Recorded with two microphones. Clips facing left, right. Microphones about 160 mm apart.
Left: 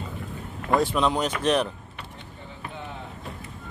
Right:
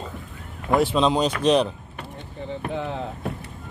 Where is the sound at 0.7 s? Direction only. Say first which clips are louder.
Right 3 dB; 20° right (ahead or behind).